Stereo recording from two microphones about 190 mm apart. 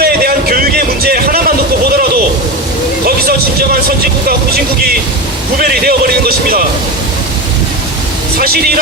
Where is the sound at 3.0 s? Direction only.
50° right (ahead or behind).